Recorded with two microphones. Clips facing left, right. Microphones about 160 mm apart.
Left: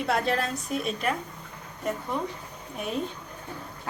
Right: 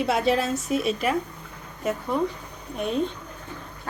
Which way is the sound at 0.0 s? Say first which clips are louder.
Right 4 dB; centre (ahead or behind).